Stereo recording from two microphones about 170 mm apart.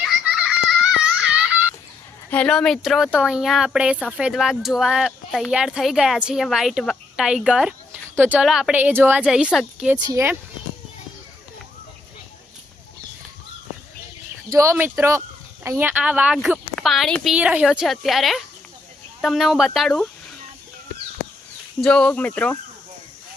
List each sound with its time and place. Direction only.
0.0 s a sound: 5° right (ahead or behind)
2.3 s speech: 5° left (ahead or behind)
10.0 s speech: 20° right (ahead or behind)
14.5 s a woman's voice: 15° right (ahead or behind); by 20.1 s centre (ahead or behind)
21.8 s speech: 5° left (ahead or behind)